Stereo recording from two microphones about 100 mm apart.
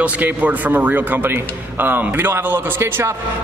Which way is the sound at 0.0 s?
15° right (ahead or behind).